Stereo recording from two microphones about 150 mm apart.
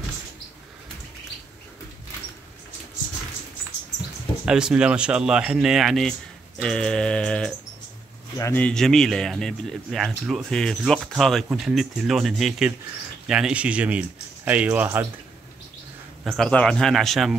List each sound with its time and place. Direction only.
4.5 s speech: 5° right (ahead or behind)
8.4 s speech: 20° left (ahead or behind)
8.6 s speech: 5° left (ahead or behind); by 15.0 s 10° right (ahead or behind)
16.3 s speech: 5° left (ahead or behind)